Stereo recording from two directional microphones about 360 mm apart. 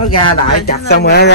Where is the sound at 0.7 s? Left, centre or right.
Left.